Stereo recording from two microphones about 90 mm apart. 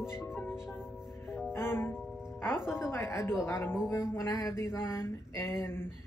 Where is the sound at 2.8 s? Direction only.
30° left (ahead or behind).